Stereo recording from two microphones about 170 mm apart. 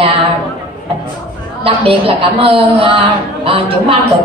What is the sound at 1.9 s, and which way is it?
A woman's voice, 30° right (ahead or behind).